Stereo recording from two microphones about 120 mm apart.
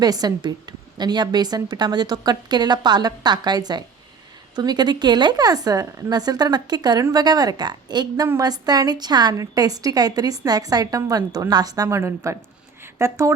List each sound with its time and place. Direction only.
0.0 s a woman's voice: 35° right (ahead or behind)